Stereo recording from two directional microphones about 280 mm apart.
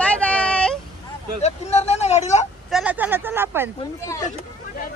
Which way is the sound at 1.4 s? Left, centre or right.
Left.